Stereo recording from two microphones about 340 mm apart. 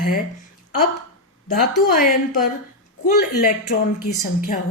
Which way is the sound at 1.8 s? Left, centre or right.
Left.